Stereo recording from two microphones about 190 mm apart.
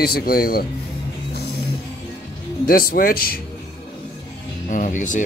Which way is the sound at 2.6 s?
50° left (ahead or behind).